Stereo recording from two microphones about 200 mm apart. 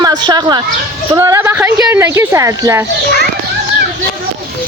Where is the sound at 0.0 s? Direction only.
20° right (ahead or behind).